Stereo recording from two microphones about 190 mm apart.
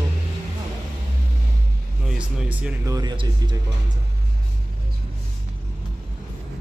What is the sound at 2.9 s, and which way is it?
Speech, 20° right (ahead or behind).